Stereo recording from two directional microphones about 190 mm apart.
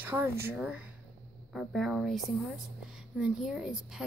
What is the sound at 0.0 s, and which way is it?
A woman's voice, 10° right (ahead or behind).